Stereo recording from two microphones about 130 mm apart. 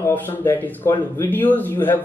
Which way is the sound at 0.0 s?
15° left (ahead or behind).